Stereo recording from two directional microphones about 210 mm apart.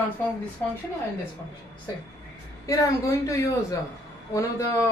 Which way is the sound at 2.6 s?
15° left (ahead or behind).